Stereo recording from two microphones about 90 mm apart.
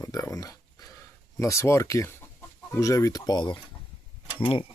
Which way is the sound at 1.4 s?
35° left (ahead or behind).